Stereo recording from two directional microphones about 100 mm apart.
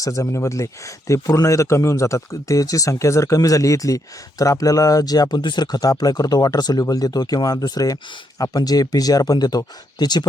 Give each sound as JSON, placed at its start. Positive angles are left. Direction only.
{"t": 0.0, "sound": "speech", "side_deg": 35}